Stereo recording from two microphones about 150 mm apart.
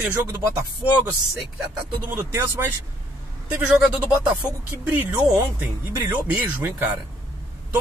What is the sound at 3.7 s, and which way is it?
Speech, 5° right (ahead or behind).